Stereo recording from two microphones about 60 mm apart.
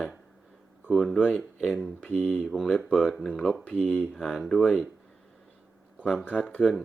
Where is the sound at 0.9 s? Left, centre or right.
Centre.